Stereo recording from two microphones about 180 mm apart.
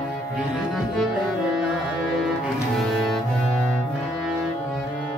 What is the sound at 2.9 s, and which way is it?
Music, centre (ahead or behind).